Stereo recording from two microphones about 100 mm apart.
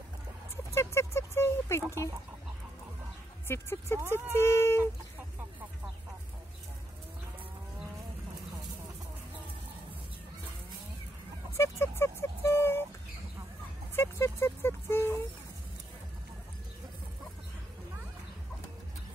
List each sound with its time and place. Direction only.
0.7 s speech: 25° left (ahead or behind)
3.4 s speech: 25° left (ahead or behind)
11.5 s speech: 25° left (ahead or behind)
13.9 s speech: 25° left (ahead or behind)